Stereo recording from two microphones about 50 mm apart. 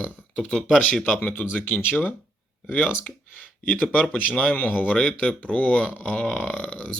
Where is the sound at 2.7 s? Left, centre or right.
Left.